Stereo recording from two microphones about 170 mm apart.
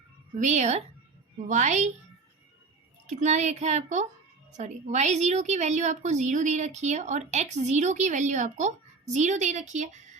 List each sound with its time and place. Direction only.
0.3 s a woman's voice: 40° right (ahead or behind)
3.1 s a woman's voice: 45° right (ahead or behind)